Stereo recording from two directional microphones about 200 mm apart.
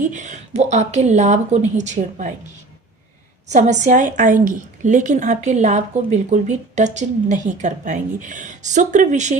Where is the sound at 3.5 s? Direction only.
35° right (ahead or behind).